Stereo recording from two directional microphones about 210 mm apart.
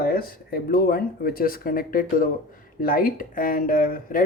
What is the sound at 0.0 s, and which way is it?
Speech, 45° left (ahead or behind).